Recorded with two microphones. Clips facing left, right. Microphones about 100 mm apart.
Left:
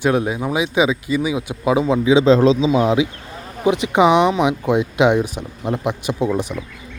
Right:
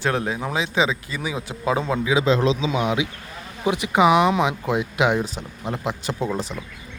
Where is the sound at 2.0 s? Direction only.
30° left (ahead or behind).